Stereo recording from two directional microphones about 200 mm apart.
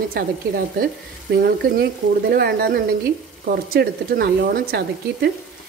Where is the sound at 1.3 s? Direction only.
50° right (ahead or behind).